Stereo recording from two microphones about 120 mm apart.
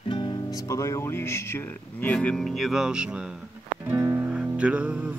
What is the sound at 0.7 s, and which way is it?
Speech, 25° left (ahead or behind).